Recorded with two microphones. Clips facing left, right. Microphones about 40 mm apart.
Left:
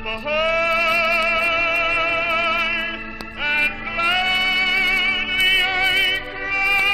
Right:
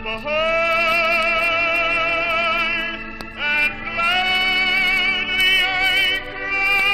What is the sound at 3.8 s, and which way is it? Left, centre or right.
Music, left.